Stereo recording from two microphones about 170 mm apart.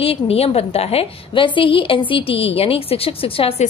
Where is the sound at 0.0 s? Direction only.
35° left (ahead or behind).